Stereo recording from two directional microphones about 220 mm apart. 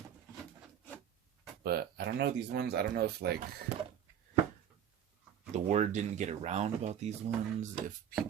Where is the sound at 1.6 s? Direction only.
45° right (ahead or behind).